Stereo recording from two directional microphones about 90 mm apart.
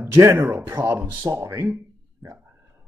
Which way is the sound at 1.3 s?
35° right (ahead or behind).